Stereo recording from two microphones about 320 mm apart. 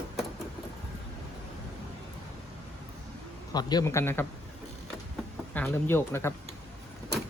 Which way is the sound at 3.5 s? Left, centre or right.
Centre.